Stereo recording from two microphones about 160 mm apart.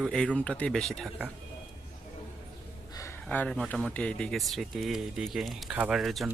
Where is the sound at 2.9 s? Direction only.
15° left (ahead or behind).